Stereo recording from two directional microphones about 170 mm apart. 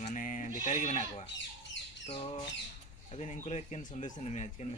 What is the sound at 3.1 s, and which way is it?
Speech, 40° left (ahead or behind).